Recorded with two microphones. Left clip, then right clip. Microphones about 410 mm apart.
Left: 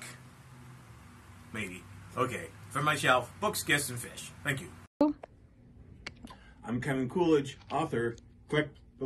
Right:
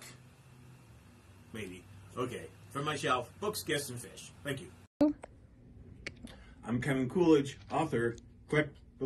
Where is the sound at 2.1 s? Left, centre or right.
Right.